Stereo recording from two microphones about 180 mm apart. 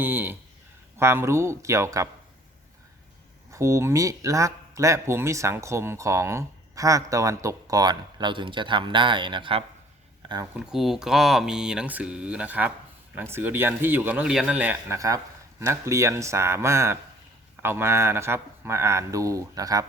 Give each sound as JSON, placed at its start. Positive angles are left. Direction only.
{"t": 0.0, "sound": "speech", "side_deg": -10}
{"t": 3.5, "sound": "speech", "side_deg": -15}
{"t": 10.5, "sound": "speech", "side_deg": -5}